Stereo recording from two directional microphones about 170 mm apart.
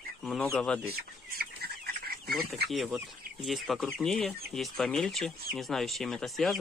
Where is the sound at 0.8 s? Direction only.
65° right (ahead or behind).